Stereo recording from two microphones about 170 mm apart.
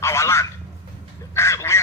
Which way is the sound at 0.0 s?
15° left (ahead or behind).